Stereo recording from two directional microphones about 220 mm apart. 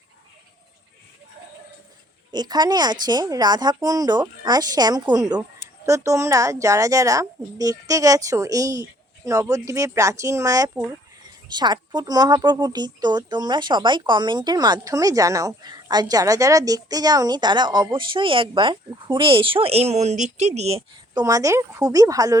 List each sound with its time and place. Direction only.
2.3 s a woman's voice: 20° right (ahead or behind)
21.1 s a woman's voice: 15° right (ahead or behind)